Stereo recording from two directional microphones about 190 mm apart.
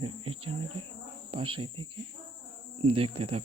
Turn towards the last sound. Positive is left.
turn(degrees=-30)  # may be behind; listen again after turning